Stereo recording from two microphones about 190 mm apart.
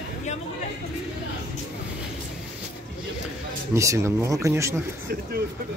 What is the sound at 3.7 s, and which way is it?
Speech, 15° right (ahead or behind).